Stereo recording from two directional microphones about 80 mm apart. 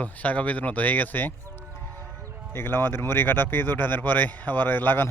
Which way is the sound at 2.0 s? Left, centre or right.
Right.